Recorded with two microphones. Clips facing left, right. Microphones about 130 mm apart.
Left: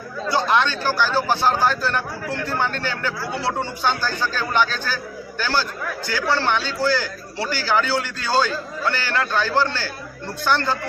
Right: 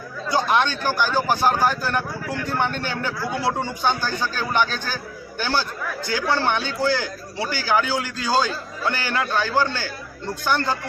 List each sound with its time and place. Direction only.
0.3 s a man's voice: 15° right (ahead or behind)